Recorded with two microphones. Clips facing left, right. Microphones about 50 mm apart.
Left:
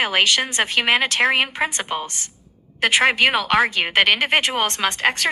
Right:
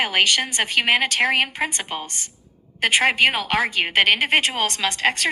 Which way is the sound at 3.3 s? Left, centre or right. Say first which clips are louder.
Left 4 dB; left.